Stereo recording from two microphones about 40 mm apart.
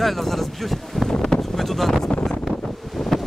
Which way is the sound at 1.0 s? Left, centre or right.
Centre.